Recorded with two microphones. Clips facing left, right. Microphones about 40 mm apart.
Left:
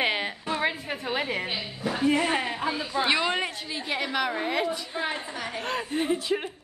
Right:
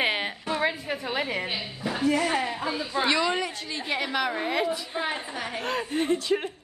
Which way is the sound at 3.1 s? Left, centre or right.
Left.